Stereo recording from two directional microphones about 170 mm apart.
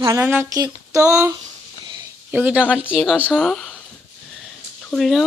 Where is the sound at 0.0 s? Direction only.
20° right (ahead or behind).